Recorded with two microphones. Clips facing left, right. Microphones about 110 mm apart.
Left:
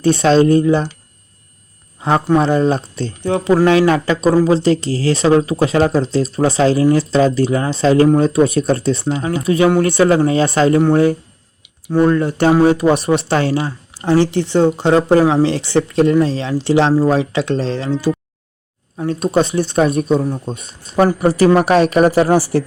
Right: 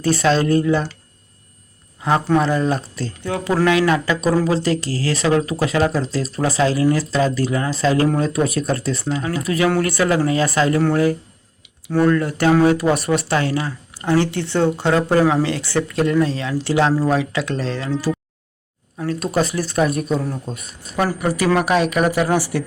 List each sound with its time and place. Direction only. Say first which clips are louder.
0.0 s speech: left 5 dB; 25° left (ahead or behind)
2.0 s a man's voice: left 3 dB; 25° left (ahead or behind)